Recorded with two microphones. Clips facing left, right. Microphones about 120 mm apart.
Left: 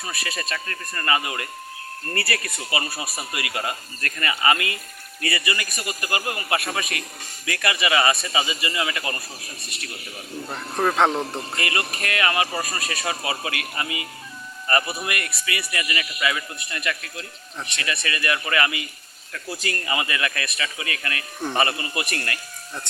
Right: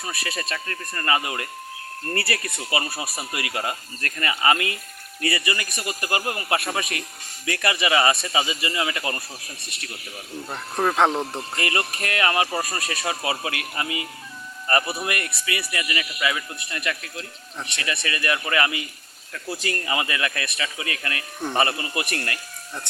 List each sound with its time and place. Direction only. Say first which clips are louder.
0.0 s speech: right 1 dB; 25° right (ahead or behind)
10.5 s speech: even; 5° right (ahead or behind)
11.6 s speech: right 2 dB; 30° right (ahead or behind)